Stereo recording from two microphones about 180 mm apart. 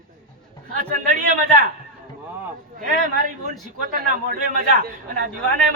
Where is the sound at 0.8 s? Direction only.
50° right (ahead or behind).